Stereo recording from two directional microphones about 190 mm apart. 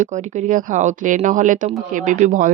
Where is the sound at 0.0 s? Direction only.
40° right (ahead or behind).